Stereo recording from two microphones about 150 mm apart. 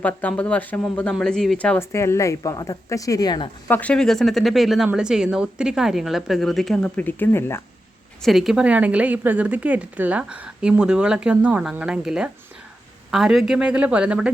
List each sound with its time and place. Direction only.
0.0 s speech: 10° left (ahead or behind); by 3.5 s 30° left (ahead or behind)
3.7 s a woman's voice: 10° left (ahead or behind)
8.2 s a woman's voice: centre (ahead or behind)